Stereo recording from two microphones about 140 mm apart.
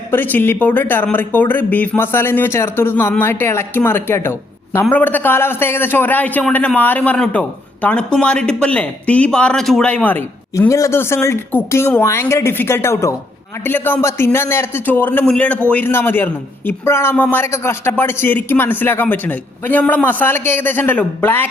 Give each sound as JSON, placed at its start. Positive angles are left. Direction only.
{"t": 0.1, "sound": "a woman's voice", "side_deg": 15}